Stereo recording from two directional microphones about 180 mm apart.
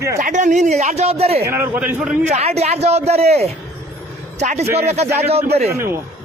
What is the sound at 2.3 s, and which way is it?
A man's voice, 35° right (ahead or behind).